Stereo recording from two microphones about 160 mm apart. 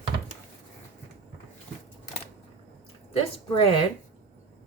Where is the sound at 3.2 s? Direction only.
35° left (ahead or behind).